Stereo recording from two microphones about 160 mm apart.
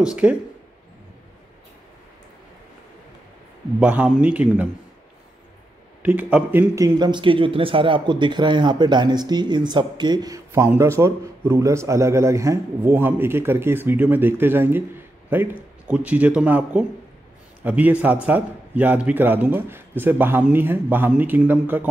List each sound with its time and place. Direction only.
0.0 s a man's voice: 5° right (ahead or behind)
3.8 s a man's voice: 10° right (ahead or behind)
6.0 s a man's voice: 10° right (ahead or behind)